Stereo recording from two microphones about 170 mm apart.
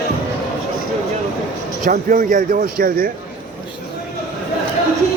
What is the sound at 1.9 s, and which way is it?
Speech, 50° right (ahead or behind).